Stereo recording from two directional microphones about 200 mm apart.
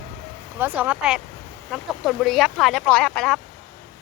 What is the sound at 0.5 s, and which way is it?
Speech, 10° right (ahead or behind).